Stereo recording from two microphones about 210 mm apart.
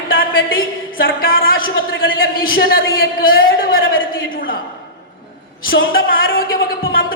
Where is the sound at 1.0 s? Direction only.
45° left (ahead or behind).